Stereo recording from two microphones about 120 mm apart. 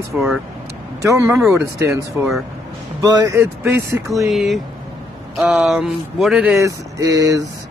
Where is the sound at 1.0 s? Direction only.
25° right (ahead or behind).